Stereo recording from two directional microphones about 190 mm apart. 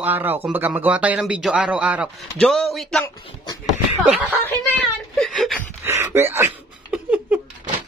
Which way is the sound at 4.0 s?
Centre (ahead or behind).